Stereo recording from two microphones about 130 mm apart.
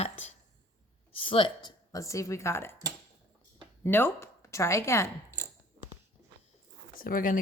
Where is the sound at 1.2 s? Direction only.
40° left (ahead or behind).